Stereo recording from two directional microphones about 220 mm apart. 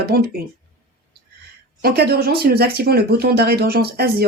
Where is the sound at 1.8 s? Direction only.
45° right (ahead or behind).